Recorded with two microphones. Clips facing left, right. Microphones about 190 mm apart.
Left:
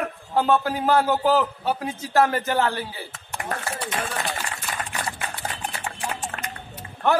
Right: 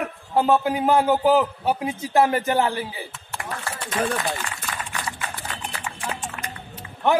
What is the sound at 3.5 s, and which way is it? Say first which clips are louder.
Speech: left 4 dB; 45° left (ahead or behind).